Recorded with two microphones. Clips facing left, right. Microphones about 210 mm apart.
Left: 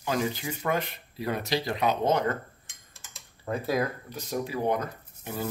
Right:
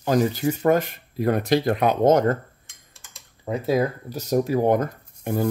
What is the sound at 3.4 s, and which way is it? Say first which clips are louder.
Speech: right 6 dB; 25° right (ahead or behind).